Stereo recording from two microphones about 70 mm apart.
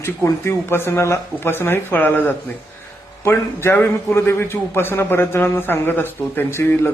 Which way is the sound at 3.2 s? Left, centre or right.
Left.